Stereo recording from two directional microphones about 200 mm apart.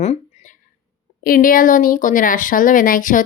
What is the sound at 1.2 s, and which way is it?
Speech, 45° left (ahead or behind).